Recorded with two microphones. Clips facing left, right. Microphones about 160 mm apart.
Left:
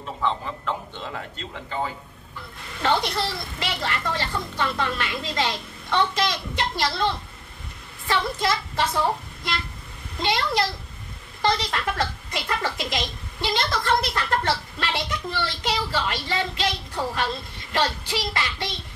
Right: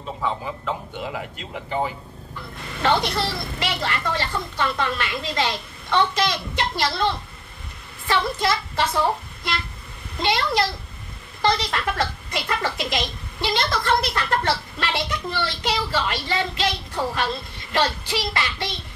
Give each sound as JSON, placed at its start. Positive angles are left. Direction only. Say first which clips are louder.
{"t": 0.2, "sound": "speech", "louder": "left 1 dB", "side_deg": -10}
{"t": 2.8, "sound": "a woman's voice", "louder": "right 2 dB", "side_deg": -70}